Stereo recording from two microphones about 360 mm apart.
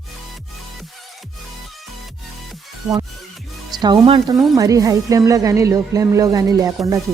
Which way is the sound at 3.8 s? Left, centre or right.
Centre.